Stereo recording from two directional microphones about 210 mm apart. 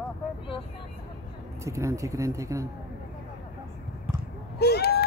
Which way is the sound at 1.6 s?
15° right (ahead or behind).